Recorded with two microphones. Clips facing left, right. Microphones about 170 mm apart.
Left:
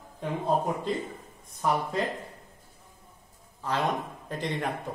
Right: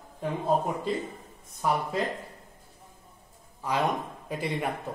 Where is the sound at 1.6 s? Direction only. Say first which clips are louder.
Even; 5° right (ahead or behind).